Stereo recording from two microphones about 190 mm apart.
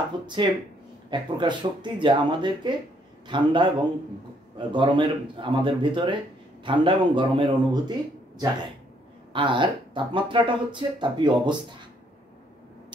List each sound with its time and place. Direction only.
0.4 s speech: 25° right (ahead or behind)